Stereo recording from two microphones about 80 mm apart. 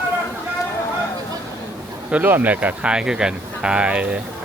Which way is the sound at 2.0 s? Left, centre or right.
Right.